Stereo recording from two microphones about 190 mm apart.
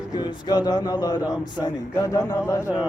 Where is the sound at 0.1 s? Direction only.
20° left (ahead or behind).